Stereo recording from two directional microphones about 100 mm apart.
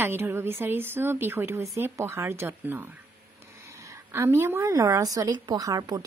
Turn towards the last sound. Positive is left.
turn(degrees=-40)  # may be behind; listen again after turning